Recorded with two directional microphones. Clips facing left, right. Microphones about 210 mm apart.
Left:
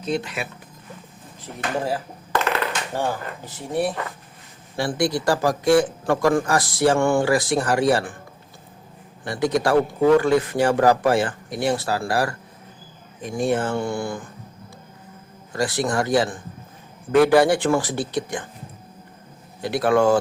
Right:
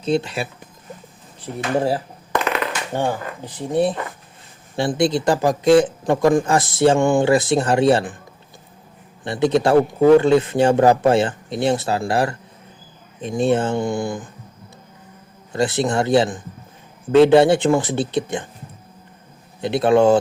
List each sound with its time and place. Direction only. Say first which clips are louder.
0.0 s a man's voice: right 5 dB; 30° right (ahead or behind)
2.9 s a man's voice: right 3 dB; 20° right (ahead or behind)
9.2 s a man's voice: right 4 dB; 25° right (ahead or behind)
15.5 s a man's voice: right 3 dB; 25° right (ahead or behind)
19.6 s a man's voice: right 4 dB; 25° right (ahead or behind)